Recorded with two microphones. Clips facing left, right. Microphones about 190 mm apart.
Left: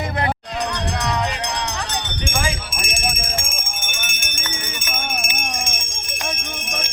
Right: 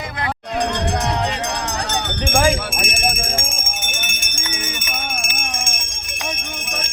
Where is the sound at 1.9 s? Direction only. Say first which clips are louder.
Right 5 dB; 50° right (ahead or behind).